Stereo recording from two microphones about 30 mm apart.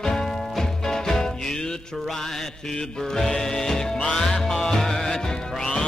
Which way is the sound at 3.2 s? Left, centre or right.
Centre.